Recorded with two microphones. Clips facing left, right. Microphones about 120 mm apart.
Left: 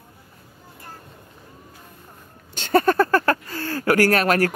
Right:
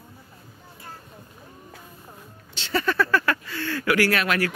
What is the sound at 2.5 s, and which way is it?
Speech, 50° left (ahead or behind).